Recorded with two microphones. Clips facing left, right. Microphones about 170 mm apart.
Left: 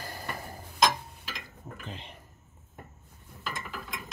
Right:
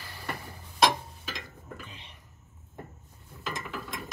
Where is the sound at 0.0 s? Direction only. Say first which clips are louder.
Left 5 dB; 40° left (ahead or behind).